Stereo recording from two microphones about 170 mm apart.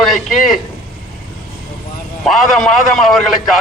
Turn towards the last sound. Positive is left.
turn(degrees=0)  # may be behind; listen again after turning